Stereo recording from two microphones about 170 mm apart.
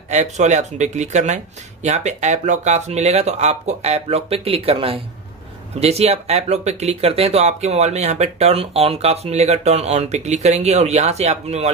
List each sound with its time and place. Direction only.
0.1 s speech: 40° right (ahead or behind)